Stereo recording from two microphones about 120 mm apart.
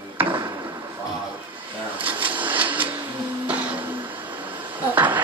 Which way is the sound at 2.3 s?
15° right (ahead or behind).